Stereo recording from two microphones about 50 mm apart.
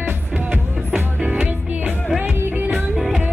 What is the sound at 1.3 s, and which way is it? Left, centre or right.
Music, right.